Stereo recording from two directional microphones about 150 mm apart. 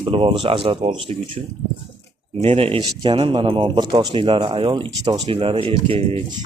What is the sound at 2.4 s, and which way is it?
Speech, 40° right (ahead or behind).